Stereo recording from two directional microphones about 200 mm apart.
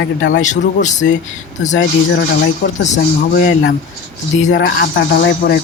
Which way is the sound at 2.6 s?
55° left (ahead or behind).